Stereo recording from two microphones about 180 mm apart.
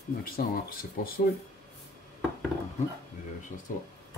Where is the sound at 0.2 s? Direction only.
55° left (ahead or behind).